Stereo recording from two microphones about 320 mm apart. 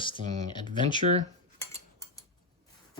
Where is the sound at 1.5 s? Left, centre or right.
Centre.